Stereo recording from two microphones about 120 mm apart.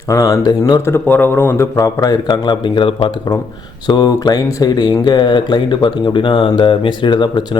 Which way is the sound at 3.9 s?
35° left (ahead or behind).